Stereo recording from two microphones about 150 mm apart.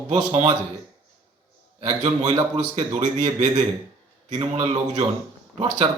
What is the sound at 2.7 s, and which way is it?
Speech, 50° right (ahead or behind).